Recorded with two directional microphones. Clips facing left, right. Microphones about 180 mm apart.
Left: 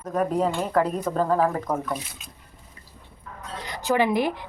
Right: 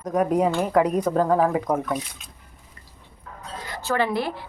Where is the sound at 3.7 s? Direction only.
15° left (ahead or behind).